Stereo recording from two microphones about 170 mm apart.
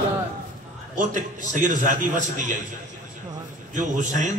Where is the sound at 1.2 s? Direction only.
50° right (ahead or behind).